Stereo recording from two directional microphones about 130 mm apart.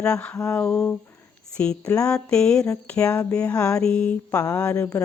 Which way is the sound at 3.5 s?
25° left (ahead or behind).